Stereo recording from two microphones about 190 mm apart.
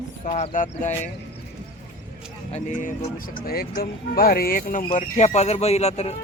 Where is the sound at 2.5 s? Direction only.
40° left (ahead or behind).